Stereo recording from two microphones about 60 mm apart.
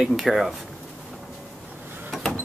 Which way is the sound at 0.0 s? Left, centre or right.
Centre.